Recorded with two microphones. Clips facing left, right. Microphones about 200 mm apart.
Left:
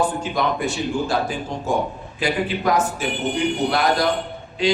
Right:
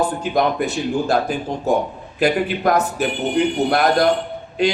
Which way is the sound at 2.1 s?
55° right (ahead or behind).